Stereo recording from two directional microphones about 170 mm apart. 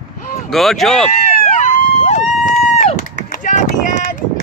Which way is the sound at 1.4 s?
45° left (ahead or behind).